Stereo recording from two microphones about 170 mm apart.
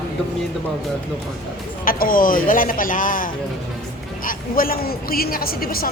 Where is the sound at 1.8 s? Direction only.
55° left (ahead or behind).